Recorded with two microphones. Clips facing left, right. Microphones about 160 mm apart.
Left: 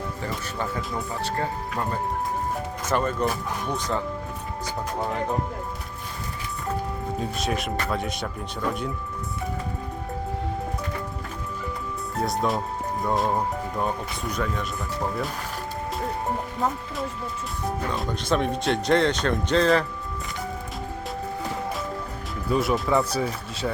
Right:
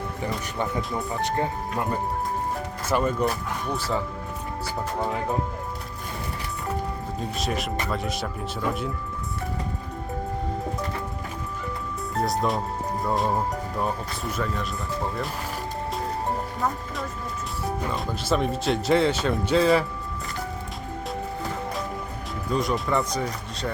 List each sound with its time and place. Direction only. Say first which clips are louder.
0.8 s speech: right 2 dB; centre (ahead or behind)
1.2 s speech: right 3 dB; 20° right (ahead or behind); by 5.4 s centre (ahead or behind)
7.2 s speech: even; centre (ahead or behind)
12.2 s speech: even; centre (ahead or behind)
17.8 s speech: left 1 dB; centre (ahead or behind)
22.4 s speech: left 2 dB; 5° left (ahead or behind)